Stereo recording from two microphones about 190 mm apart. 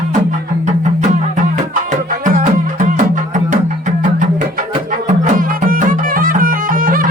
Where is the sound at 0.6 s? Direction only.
40° right (ahead or behind).